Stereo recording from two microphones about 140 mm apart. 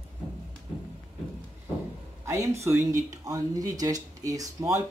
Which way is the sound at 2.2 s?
20° right (ahead or behind).